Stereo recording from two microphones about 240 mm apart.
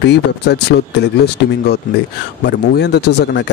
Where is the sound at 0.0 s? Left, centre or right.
Left.